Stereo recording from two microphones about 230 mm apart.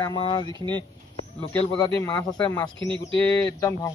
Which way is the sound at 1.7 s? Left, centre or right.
Centre.